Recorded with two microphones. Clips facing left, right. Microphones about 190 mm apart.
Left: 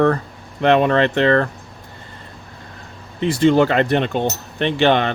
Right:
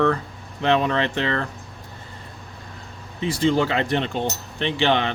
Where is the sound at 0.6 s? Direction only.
60° left (ahead or behind).